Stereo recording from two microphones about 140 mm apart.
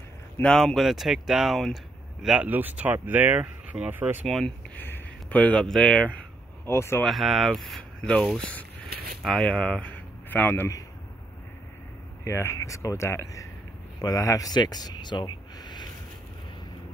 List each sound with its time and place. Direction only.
0.4 s speech: 5° left (ahead or behind); by 4.2 s 15° right (ahead or behind)
4.3 s speech: centre (ahead or behind)
4.7 s speech: 15° left (ahead or behind)
7.1 s speech: centre (ahead or behind)
8.9 s a sound: 90° right
9.2 s speech: 5° left (ahead or behind)
12.3 s speech: 20° left (ahead or behind)